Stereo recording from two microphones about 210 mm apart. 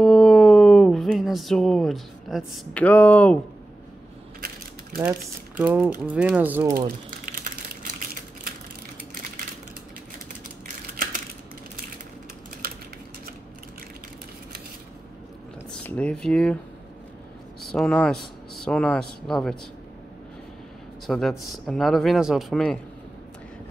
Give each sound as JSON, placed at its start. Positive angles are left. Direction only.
{"t": 0.0, "sound": "a sound", "side_deg": 0}
{"t": 5.6, "sound": "speech", "side_deg": -5}
{"t": 7.1, "sound": "a sound", "side_deg": -40}
{"t": 15.7, "sound": "speech", "side_deg": 5}
{"t": 17.7, "sound": "speech", "side_deg": 5}
{"t": 21.1, "sound": "speech", "side_deg": 0}